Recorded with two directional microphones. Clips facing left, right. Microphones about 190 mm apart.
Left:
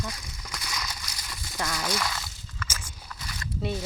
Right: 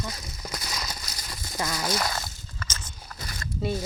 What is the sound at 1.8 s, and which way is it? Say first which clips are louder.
Slosh: right 2 dB; 40° right (ahead or behind).